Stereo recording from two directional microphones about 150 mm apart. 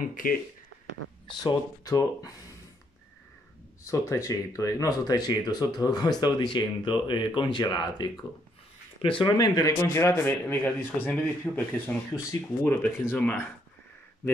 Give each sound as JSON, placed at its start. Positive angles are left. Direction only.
{"t": 0.0, "sound": "speech", "side_deg": 65}
{"t": 1.4, "sound": "speech", "side_deg": 25}
{"t": 3.8, "sound": "a man's voice", "side_deg": 20}